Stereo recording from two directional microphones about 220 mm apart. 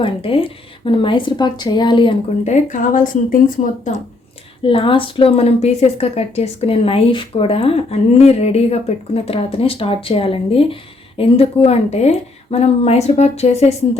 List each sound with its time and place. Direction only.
0.0 s a woman's voice: 25° left (ahead or behind)
4.6 s a woman's voice: 25° left (ahead or behind)